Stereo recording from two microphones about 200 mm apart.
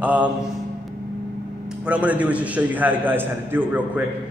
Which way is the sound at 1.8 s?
5° right (ahead or behind).